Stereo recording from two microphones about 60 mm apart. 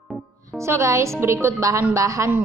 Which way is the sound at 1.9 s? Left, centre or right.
Right.